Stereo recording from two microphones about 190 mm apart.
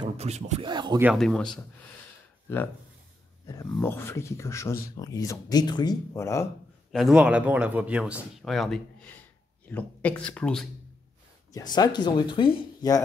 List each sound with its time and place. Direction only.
0.0 s speech: 35° right (ahead or behind)
0.7 s speech: 25° right (ahead or behind)
1.1 s speech: centre (ahead or behind)
3.8 s speech: 10° left (ahead or behind)
6.9 s speech: centre (ahead or behind)
11.5 s speech: 20° left (ahead or behind)